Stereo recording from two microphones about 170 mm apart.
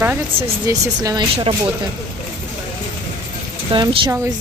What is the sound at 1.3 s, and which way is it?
Speech, 30° right (ahead or behind).